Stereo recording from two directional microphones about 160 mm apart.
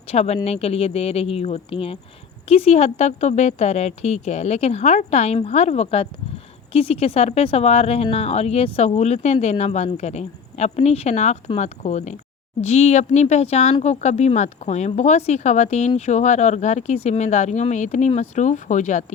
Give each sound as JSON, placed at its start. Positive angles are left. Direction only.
{"t": 0.1, "sound": "speech", "side_deg": 40}